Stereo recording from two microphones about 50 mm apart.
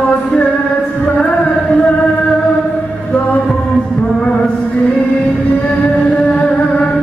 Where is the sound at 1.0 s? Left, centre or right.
Left.